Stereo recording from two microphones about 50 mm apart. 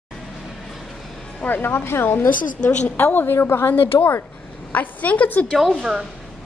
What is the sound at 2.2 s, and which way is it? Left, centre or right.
Speech, left.